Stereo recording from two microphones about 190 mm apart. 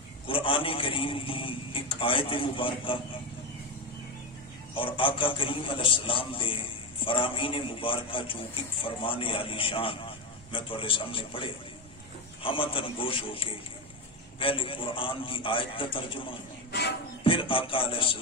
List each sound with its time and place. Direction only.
0.3 s a man's voice: 25° left (ahead or behind)
4.7 s a man's voice: 30° left (ahead or behind)